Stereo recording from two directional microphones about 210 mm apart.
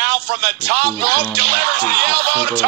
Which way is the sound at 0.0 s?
50° right (ahead or behind).